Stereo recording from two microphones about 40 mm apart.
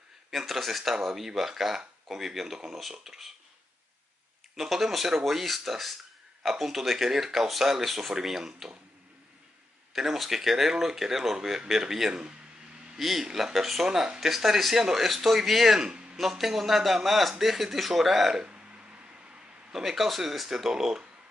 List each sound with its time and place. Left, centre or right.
0.3 s a man's voice: centre
4.6 s a man's voice: centre
9.9 s speech: centre
12.1 s speech: right
12.9 s a man's voice: centre
13.8 s speech: centre
15.9 s a sound: right
16.2 s a man's voice: centre
18.4 s a sound: right
19.7 s speech: centre